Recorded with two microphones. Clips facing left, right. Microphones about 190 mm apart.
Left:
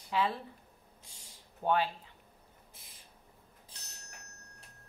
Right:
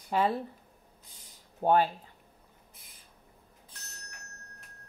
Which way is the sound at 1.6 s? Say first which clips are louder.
Right 5 dB; 45° right (ahead or behind).